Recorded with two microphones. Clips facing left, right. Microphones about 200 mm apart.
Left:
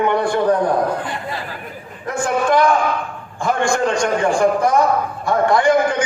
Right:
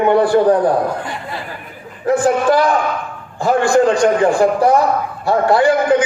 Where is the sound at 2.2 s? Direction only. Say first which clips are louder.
Even; 35° right (ahead or behind).